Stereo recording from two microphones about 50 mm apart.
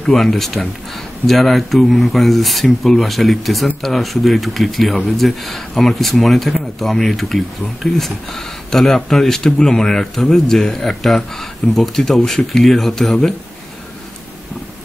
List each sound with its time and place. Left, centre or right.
0.0 s speech: centre